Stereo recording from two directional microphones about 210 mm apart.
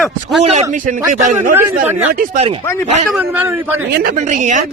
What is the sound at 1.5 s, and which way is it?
Speech, 10° right (ahead or behind).